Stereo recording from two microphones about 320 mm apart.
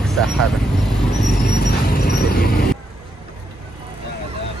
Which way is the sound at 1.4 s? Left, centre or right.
Left.